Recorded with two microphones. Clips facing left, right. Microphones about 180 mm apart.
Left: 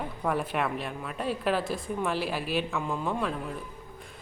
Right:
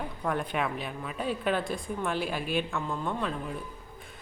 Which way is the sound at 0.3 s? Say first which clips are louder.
Left 1 dB; 5° left (ahead or behind).